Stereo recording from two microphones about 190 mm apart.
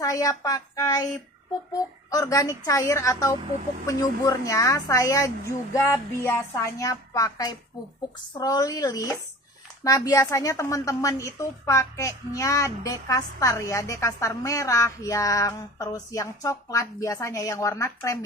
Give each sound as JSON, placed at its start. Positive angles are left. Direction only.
{"t": 0.0, "sound": "a woman's voice", "side_deg": 20}